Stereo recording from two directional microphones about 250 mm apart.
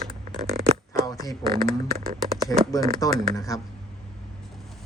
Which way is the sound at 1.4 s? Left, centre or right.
Right.